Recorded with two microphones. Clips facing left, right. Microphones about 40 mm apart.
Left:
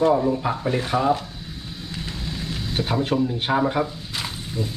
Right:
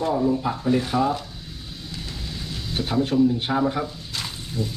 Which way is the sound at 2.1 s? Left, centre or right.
Left.